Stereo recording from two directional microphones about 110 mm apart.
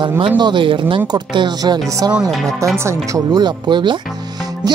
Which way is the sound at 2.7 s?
25° right (ahead or behind).